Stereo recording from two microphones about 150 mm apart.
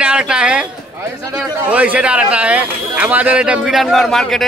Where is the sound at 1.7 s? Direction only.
10° right (ahead or behind).